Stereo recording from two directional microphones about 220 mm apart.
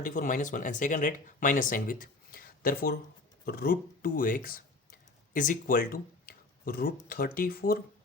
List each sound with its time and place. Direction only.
0.0 s speech: 35° left (ahead or behind)